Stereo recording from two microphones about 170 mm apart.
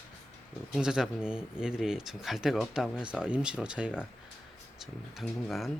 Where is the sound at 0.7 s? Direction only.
5° right (ahead or behind).